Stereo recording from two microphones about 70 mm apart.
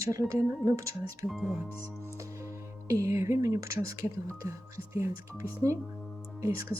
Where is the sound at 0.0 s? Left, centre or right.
Right.